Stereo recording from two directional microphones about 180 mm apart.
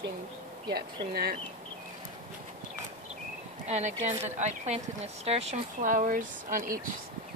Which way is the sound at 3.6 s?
40° right (ahead or behind).